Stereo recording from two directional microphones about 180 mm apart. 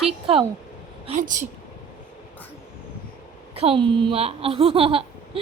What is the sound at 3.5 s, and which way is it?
Speech, 30° right (ahead or behind).